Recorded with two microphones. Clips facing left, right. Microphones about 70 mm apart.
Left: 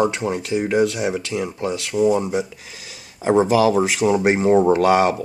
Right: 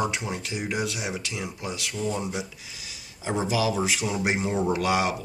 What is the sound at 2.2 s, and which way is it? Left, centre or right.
Speech, left.